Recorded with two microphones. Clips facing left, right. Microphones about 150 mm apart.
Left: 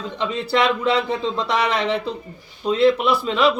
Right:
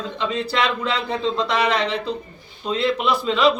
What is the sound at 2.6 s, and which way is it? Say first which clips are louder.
Speech: left 5 dB; 10° left (ahead or behind).